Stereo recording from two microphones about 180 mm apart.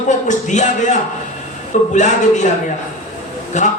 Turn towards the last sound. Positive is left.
turn(degrees=40)  # may be behind; listen again after turning